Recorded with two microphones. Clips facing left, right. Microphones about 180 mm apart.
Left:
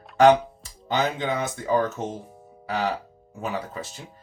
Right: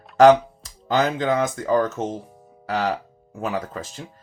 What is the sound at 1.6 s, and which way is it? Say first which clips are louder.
Speech: right 3 dB; 40° right (ahead or behind).